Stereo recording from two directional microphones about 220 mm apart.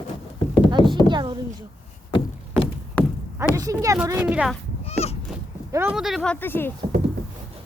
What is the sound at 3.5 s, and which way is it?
Speech, 15° right (ahead or behind).